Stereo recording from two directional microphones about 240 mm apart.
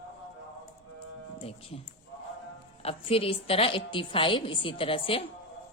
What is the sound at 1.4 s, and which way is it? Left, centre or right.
Speech, left.